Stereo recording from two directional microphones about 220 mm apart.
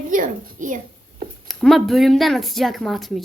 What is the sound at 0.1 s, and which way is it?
Speech, 35° right (ahead or behind).